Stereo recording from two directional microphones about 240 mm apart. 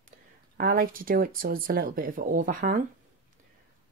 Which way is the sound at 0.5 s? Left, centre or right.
Right.